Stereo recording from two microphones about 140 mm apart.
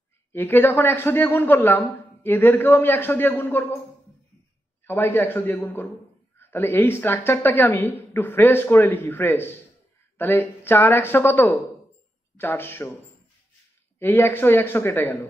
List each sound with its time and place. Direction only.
0.3 s a man's voice: 15° left (ahead or behind)
4.8 s a man's voice: 15° left (ahead or behind)
13.9 s a man's voice: 15° left (ahead or behind)